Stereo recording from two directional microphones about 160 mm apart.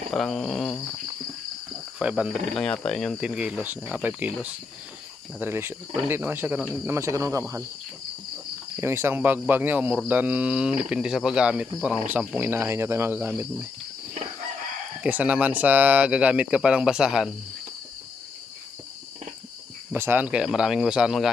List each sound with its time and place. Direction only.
0.1 s speech: centre (ahead or behind)
2.0 s speech: 5° right (ahead or behind)
5.4 s speech: 15° right (ahead or behind)
8.7 s speech: 15° right (ahead or behind)
15.0 s speech: 10° right (ahead or behind)
19.9 s speech: 15° right (ahead or behind)